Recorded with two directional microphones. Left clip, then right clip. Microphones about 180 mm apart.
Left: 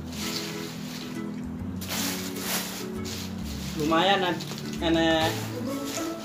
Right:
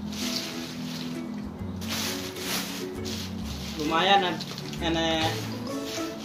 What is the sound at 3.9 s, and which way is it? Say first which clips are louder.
Speech: right 1 dB; centre (ahead or behind).